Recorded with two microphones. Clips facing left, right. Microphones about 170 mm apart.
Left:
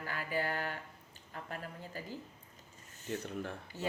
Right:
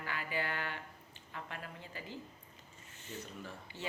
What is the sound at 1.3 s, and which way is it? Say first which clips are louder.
Speech: left 2 dB; 40° left (ahead or behind).